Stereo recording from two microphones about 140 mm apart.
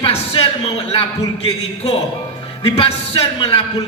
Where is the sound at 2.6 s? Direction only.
45° left (ahead or behind).